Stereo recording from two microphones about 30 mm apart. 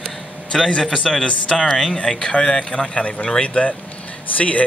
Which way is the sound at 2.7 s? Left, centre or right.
Left.